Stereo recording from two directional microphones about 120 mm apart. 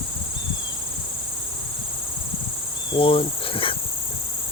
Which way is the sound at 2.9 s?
50° left (ahead or behind).